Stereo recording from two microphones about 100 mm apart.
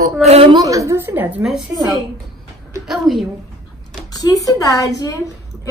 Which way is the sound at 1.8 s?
45° right (ahead or behind).